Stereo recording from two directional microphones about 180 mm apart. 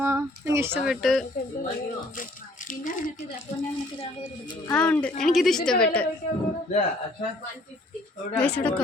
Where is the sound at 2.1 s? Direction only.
50° left (ahead or behind).